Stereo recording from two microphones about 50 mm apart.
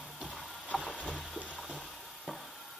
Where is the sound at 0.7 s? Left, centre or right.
Centre.